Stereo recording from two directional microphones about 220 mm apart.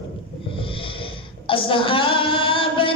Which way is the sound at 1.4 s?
25° left (ahead or behind).